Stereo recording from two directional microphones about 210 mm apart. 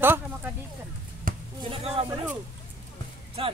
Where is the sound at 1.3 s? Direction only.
40° right (ahead or behind).